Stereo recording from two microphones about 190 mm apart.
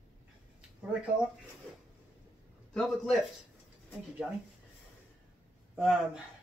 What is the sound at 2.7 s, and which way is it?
Speech, centre (ahead or behind).